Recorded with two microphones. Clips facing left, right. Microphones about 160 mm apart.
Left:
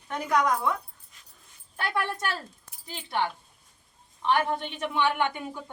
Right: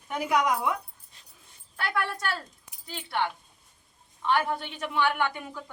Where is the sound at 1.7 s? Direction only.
20° left (ahead or behind).